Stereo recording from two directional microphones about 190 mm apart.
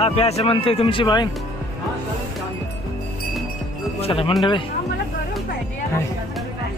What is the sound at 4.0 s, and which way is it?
Speech, 30° left (ahead or behind).